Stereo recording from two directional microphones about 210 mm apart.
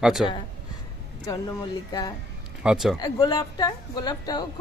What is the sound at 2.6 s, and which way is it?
Speech, centre (ahead or behind).